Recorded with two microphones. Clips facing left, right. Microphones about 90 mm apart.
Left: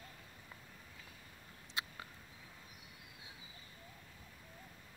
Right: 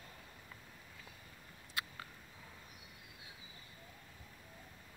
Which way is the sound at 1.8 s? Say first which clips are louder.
Even; 20° left (ahead or behind).